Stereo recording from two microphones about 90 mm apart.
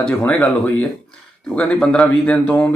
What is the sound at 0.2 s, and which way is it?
Speech, 20° left (ahead or behind).